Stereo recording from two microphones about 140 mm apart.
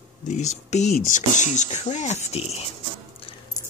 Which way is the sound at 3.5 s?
25° left (ahead or behind).